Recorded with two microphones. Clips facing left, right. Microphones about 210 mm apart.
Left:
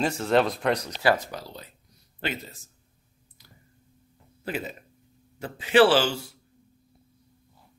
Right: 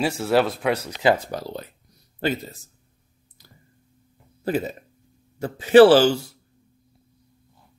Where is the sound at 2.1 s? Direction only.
40° right (ahead or behind).